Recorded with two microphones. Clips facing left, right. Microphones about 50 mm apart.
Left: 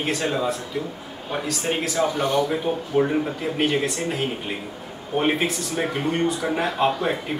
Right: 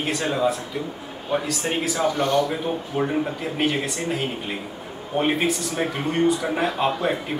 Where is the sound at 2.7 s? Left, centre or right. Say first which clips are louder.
Left 2 dB; centre.